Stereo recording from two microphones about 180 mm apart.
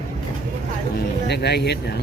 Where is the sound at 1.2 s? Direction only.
70° left (ahead or behind).